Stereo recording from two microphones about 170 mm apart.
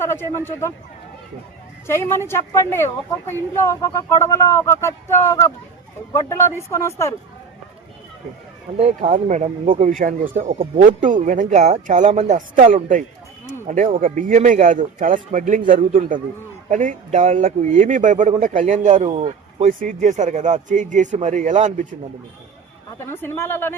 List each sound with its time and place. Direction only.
0.1 s speech: 15° left (ahead or behind)
1.9 s speech: 15° left (ahead or behind)
8.8 s a man's voice: 40° right (ahead or behind)
23.0 s speech: 15° left (ahead or behind)